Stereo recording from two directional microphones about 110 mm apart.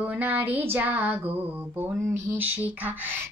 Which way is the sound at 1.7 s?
20° right (ahead or behind).